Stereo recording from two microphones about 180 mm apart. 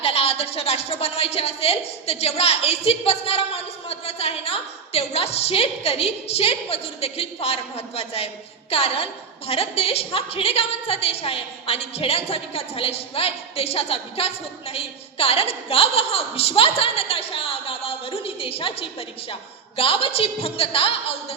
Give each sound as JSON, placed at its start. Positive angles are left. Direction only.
{"t": 0.0, "sound": "a woman's voice", "side_deg": 35}